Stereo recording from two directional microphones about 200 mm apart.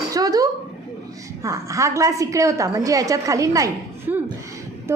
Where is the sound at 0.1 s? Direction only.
20° right (ahead or behind).